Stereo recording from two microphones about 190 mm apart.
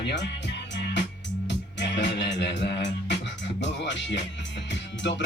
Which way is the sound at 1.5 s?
65° left (ahead or behind).